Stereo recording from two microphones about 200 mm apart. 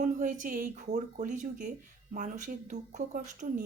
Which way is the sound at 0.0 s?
40° right (ahead or behind).